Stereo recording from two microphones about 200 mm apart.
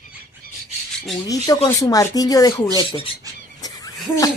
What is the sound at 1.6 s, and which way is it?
Speech, 15° left (ahead or behind).